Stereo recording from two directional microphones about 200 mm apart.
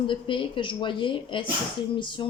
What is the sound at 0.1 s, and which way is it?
A man's voice, 25° left (ahead or behind).